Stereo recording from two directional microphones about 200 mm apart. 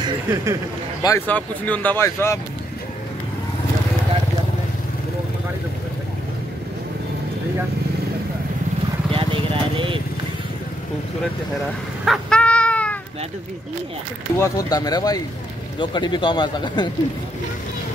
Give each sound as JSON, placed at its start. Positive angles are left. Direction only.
{"t": 0.0, "sound": "speech", "side_deg": -15}
{"t": 1.0, "sound": "speech", "side_deg": 10}
{"t": 9.1, "sound": "vehicle", "side_deg": -25}
{"t": 12.0, "sound": "cat", "side_deg": 0}
{"t": 14.3, "sound": "speech", "side_deg": 15}